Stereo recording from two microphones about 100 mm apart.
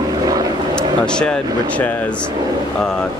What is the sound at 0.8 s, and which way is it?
Speech, 10° left (ahead or behind).